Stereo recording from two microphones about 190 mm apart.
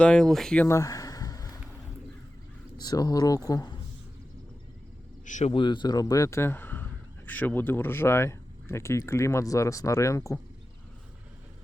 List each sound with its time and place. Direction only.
0.0 s speech: 5° left (ahead or behind)
0.8 s a sound: 20° left (ahead or behind)
2.7 s speech: 20° left (ahead or behind)
5.2 s a man's voice: 40° left (ahead or behind)
5.5 s speech: 25° left (ahead or behind)